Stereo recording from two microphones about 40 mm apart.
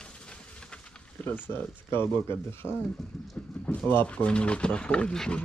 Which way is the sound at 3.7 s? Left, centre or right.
Left.